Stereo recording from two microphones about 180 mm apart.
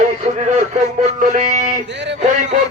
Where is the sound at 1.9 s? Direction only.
75° right (ahead or behind).